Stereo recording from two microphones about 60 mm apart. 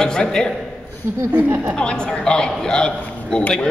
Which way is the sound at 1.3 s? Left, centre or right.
Right.